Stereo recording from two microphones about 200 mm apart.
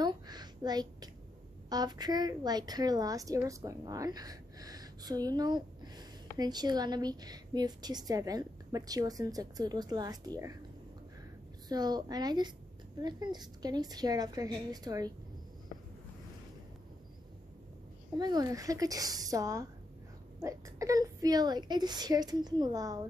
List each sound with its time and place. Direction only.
0.0 s a sound: 20° right (ahead or behind)
1.7 s a woman's voice: 20° right (ahead or behind)
11.7 s a woman's voice: 20° right (ahead or behind)
18.1 s a woman's voice: 20° right (ahead or behind)